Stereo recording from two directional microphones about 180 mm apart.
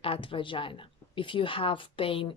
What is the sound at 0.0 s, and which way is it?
Speech, 30° left (ahead or behind).